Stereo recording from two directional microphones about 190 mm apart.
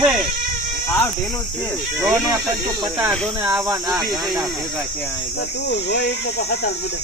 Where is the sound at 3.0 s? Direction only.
10° right (ahead or behind).